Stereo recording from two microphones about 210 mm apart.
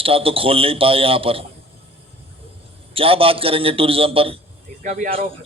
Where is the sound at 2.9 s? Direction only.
25° right (ahead or behind).